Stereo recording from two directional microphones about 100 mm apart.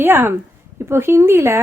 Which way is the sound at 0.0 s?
20° right (ahead or behind).